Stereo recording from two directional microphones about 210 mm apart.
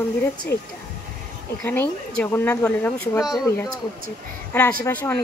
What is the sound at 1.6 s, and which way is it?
Speech, 10° left (ahead or behind).